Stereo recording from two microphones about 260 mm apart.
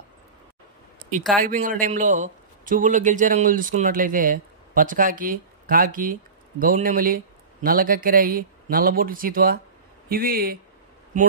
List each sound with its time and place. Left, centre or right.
1.3 s a man's voice: right